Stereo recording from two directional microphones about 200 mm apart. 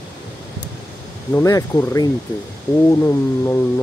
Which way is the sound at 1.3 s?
15° left (ahead or behind).